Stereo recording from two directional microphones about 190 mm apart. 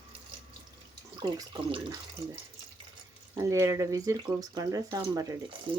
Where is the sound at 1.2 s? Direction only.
25° right (ahead or behind).